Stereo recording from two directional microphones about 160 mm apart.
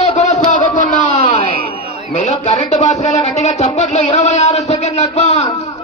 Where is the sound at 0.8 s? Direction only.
55° left (ahead or behind).